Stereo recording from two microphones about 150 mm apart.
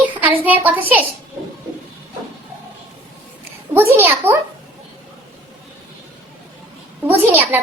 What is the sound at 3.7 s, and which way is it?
Speech, 15° right (ahead or behind).